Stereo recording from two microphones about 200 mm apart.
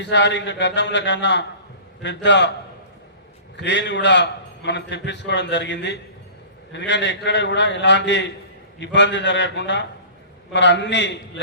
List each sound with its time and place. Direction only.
0.0 s a man's voice: 60° left (ahead or behind)
3.6 s a man's voice: 60° left (ahead or behind)